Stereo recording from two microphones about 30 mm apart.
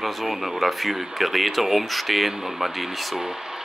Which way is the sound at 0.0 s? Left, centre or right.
Centre.